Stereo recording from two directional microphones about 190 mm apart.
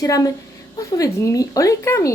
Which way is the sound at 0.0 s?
20° left (ahead or behind).